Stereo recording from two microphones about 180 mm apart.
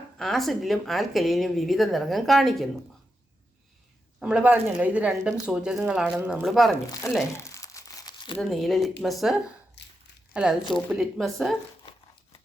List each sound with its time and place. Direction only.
0.2 s speech: centre (ahead or behind)
4.2 s speech: 5° right (ahead or behind)
6.9 s speech: 20° left (ahead or behind)
7.3 s crumpling: 15° left (ahead or behind)
8.4 s speech: centre (ahead or behind)
9.8 s a sound: 75° left (ahead or behind)
10.3 s speech: 5° right (ahead or behind)